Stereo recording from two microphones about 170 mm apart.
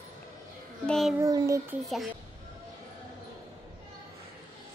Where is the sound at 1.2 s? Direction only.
20° right (ahead or behind).